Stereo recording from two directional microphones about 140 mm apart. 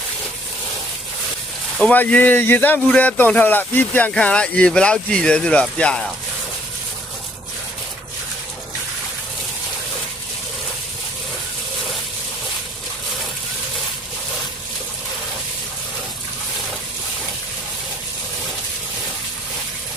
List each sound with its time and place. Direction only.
1.8 s speech: 10° left (ahead or behind)